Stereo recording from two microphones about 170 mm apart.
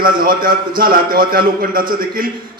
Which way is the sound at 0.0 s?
60° right (ahead or behind).